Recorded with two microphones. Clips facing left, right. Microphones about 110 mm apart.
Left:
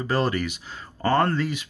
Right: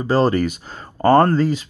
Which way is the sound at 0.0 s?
30° right (ahead or behind).